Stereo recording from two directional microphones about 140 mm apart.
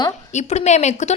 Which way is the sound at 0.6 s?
55° left (ahead or behind).